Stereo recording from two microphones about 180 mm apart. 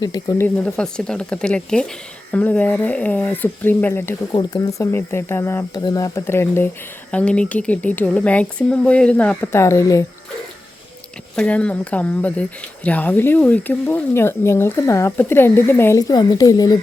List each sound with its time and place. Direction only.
0.0 s speech: 20° left (ahead or behind)
0.4 s speech: 5° left (ahead or behind)
11.3 s speech: 5° left (ahead or behind)